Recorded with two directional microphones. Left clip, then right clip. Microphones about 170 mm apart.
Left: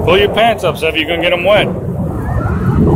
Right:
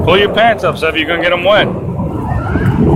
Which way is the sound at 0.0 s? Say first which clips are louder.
Right 1 dB; 10° left (ahead or behind).